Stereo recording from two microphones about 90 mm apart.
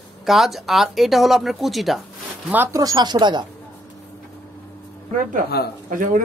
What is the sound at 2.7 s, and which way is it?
Speech, 45° right (ahead or behind).